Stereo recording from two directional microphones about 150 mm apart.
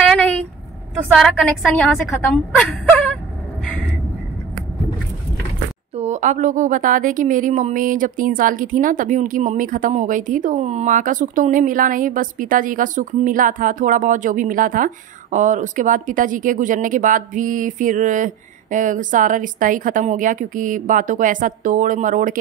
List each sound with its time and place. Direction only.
0.1 s a sound: 10° left (ahead or behind)
1.1 s a woman's voice: centre (ahead or behind)
5.9 s speech: 50° right (ahead or behind)